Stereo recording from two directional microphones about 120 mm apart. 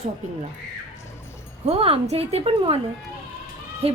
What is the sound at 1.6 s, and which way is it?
Speech, 55° right (ahead or behind).